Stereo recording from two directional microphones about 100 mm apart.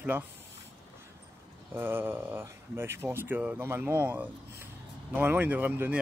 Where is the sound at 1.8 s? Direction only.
20° right (ahead or behind).